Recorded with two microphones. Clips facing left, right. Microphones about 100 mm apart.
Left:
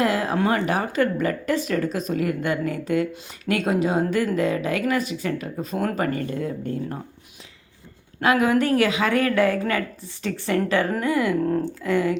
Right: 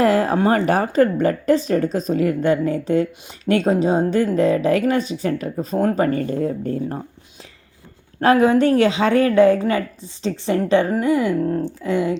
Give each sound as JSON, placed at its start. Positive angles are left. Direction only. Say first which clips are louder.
{"t": 0.0, "sound": "a woman's voice", "louder": "right 5 dB", "side_deg": -40}
{"t": 2.6, "sound": "a woman's voice", "louder": "right 4 dB", "side_deg": -25}
{"t": 8.2, "sound": "a woman's voice", "louder": "right 5 dB", "side_deg": -35}